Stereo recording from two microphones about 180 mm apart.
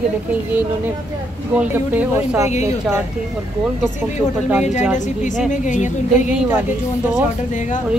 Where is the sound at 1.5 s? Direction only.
10° right (ahead or behind).